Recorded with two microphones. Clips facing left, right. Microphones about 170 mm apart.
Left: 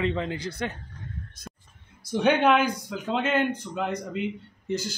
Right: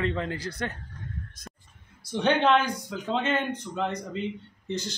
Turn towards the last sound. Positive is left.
turn(degrees=5)  # may be behind; listen again after turning